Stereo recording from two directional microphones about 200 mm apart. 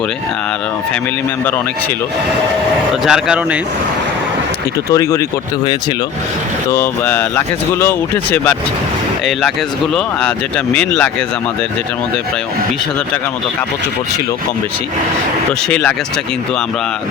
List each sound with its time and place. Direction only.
3.0 s speech: 5° right (ahead or behind)
4.9 s speech: 15° left (ahead or behind)
6.7 s speech: 10° left (ahead or behind)
9.9 s speech: 5° left (ahead or behind)
15.7 s speech: 5° left (ahead or behind)